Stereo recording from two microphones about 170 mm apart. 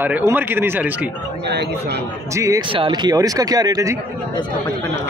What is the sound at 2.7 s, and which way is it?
Speech, 30° right (ahead or behind).